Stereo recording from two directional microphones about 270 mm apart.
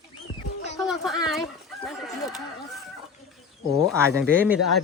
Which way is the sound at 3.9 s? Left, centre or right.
Centre.